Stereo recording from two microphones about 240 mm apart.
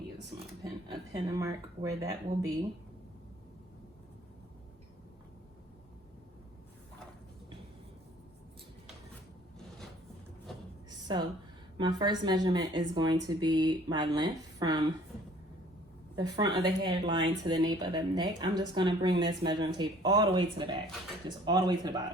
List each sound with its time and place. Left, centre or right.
1.1 s speech: centre
11.1 s speech: centre
16.1 s speech: centre